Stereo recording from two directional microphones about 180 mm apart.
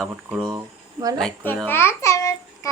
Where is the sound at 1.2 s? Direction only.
10° left (ahead or behind).